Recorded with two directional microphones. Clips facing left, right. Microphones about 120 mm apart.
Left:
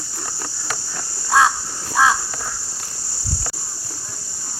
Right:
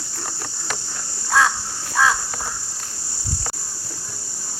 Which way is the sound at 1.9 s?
20° left (ahead or behind).